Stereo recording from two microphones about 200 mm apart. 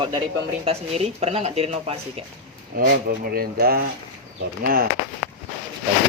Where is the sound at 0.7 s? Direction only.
30° right (ahead or behind).